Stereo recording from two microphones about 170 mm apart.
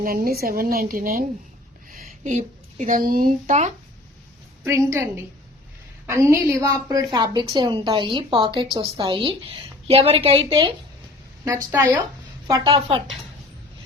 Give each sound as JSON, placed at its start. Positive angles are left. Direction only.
{"t": 0.0, "sound": "a woman's voice", "side_deg": -60}
{"t": 4.6, "sound": "a woman's voice", "side_deg": -20}
{"t": 6.2, "sound": "a woman's voice", "side_deg": -15}
{"t": 11.4, "sound": "a woman's voice", "side_deg": -15}